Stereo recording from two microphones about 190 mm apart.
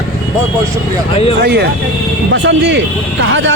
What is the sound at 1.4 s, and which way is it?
Speech, 60° right (ahead or behind).